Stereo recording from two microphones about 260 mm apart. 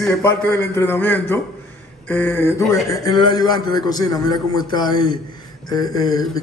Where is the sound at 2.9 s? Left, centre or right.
Centre.